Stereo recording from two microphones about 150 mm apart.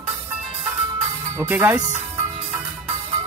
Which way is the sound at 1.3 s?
15° right (ahead or behind).